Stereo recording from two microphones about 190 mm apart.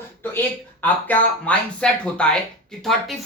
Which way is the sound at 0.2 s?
10° left (ahead or behind).